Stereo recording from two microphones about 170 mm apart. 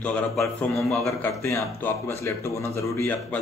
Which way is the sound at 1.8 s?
15° left (ahead or behind).